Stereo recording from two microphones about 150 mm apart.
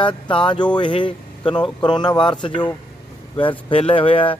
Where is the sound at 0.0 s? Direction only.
35° left (ahead or behind).